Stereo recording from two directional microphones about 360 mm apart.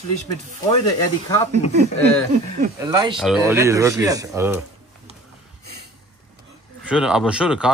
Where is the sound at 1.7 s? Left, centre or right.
Centre.